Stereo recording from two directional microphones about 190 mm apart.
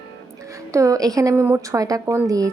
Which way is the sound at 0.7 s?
15° right (ahead or behind).